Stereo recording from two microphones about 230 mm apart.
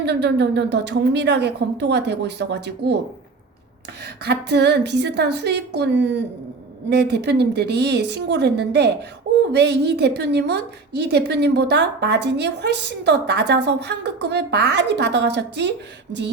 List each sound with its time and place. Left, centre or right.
0.0 s a woman's voice: right
4.0 s a woman's voice: right